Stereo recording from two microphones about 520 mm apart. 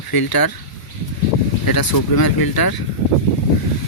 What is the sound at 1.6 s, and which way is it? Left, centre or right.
Speech, left.